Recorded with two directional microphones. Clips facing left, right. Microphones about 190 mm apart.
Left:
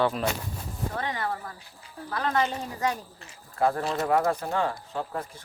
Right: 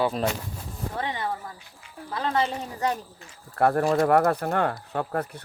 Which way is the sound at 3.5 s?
65° right (ahead or behind).